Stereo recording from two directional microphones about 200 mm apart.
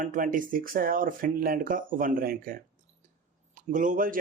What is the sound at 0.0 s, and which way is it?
Speech, 40° right (ahead or behind).